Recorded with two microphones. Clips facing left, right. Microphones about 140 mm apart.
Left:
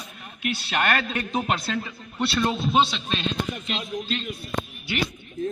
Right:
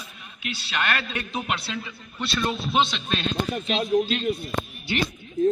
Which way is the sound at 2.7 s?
10° left (ahead or behind).